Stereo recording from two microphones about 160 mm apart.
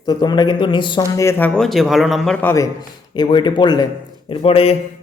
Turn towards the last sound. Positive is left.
turn(degrees=35)  # may be behind; listen again after turning